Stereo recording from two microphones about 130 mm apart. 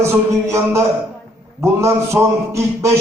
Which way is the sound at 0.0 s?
20° right (ahead or behind).